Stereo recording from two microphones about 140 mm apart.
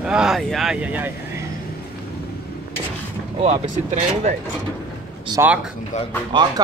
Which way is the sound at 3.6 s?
60° right (ahead or behind).